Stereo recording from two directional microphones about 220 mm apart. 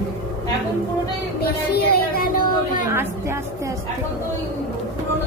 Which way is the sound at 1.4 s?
45° left (ahead or behind).